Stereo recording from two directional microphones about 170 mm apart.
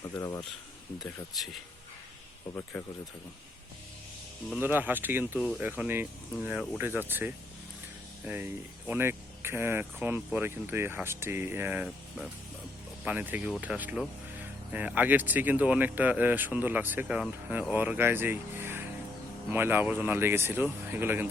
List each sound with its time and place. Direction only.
0.2 s speech: 20° left (ahead or behind)
2.7 s speech: 10° left (ahead or behind)
4.6 s speech: 10° right (ahead or behind)